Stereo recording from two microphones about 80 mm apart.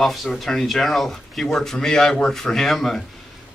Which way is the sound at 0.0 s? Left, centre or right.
Centre.